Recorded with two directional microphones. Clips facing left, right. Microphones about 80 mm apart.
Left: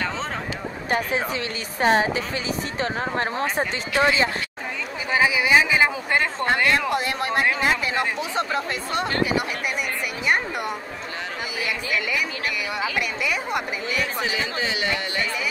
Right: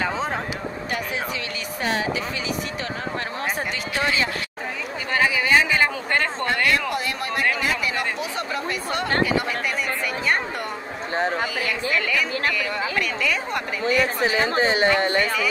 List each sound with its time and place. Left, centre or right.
0.8 s speech: left
5.1 s a woman's voice: centre
6.4 s speech: left
11.6 s a woman's voice: centre
13.8 s speech: right